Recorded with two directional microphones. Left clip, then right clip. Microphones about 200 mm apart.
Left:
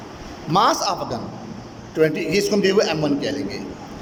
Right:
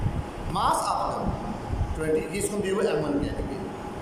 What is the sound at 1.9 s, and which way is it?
A man's voice, 50° left (ahead or behind).